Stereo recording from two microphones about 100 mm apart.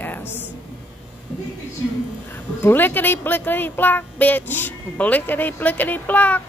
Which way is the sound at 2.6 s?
20° left (ahead or behind).